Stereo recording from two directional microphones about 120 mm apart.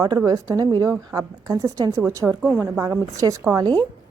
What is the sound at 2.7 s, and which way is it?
Speech, 25° right (ahead or behind).